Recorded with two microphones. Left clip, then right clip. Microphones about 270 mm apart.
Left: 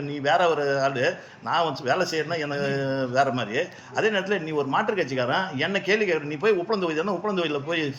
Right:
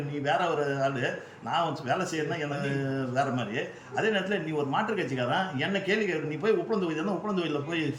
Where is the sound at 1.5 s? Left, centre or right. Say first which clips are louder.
Left 5 dB; right.